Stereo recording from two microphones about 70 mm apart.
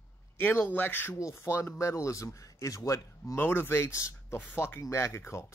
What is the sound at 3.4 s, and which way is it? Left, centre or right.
Speech, left.